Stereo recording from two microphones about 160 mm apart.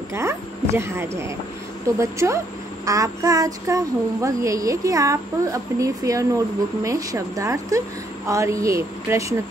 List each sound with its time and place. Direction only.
0.1 s a child's voice: 15° right (ahead or behind)